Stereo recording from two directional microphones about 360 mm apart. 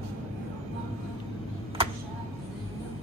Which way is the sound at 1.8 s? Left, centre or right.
Centre.